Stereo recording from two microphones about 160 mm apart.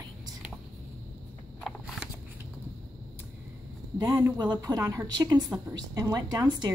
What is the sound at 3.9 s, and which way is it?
A woman's voice, 25° right (ahead or behind).